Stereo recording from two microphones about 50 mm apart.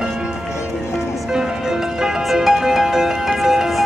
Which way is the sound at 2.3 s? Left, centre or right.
Centre.